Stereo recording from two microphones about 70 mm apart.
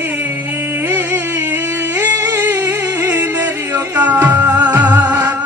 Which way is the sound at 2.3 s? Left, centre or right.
Right.